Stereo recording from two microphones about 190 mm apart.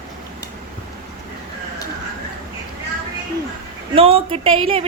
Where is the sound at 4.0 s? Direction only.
30° right (ahead or behind).